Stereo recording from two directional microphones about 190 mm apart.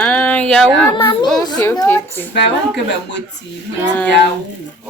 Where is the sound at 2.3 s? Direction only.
65° left (ahead or behind).